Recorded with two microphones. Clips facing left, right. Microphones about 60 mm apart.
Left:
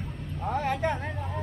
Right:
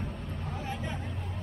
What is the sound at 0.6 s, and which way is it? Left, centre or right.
Vehicle, left.